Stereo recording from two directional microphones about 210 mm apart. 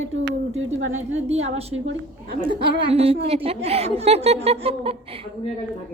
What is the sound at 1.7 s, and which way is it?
Speech, 65° right (ahead or behind).